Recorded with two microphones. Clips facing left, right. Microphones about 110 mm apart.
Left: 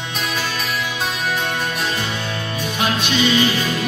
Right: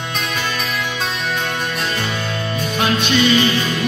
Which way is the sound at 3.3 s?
10° left (ahead or behind).